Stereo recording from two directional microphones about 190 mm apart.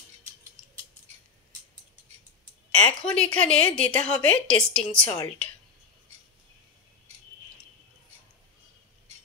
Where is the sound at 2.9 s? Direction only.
5° left (ahead or behind).